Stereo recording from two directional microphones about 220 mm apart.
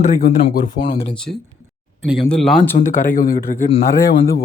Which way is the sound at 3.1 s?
40° left (ahead or behind).